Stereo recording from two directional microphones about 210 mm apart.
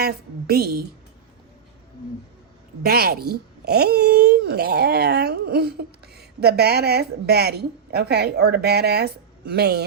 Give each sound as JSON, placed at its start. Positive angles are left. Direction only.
{"t": 0.0, "sound": "speech", "side_deg": -50}
{"t": 2.8, "sound": "speech", "side_deg": -45}